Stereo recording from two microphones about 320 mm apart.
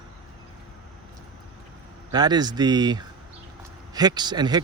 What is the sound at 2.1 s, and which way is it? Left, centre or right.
Speech, centre.